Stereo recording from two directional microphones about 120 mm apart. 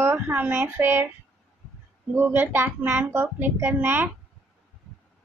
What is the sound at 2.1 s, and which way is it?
A child's voice, 15° right (ahead or behind).